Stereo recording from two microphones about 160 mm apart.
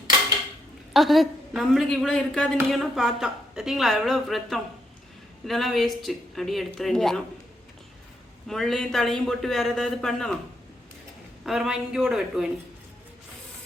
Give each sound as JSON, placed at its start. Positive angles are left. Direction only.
{"t": 0.9, "sound": "a woman's voice", "side_deg": 0}
{"t": 8.4, "sound": "a woman's voice", "side_deg": 0}
{"t": 11.4, "sound": "a woman's voice", "side_deg": -5}